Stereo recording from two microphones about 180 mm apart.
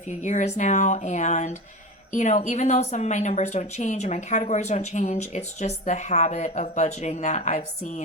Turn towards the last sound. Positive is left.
turn(degrees=40)  # may be behind; listen again after turning